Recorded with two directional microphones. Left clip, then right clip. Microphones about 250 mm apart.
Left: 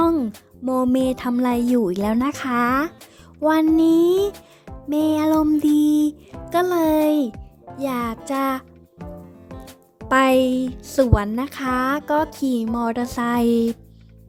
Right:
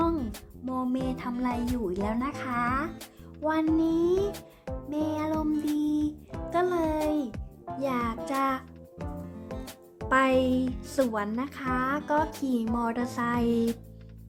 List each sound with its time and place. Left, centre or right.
0.6 s music: left
4.3 s music: centre
4.9 s music: left
9.5 s music: centre
10.1 s music: left
12.7 s speech: left